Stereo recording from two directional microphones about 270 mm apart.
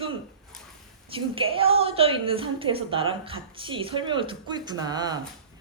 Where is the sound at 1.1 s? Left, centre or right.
Centre.